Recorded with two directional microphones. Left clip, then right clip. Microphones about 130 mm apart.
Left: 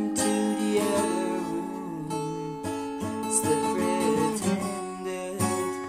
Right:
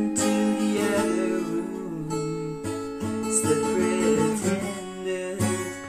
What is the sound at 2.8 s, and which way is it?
Music, 20° left (ahead or behind).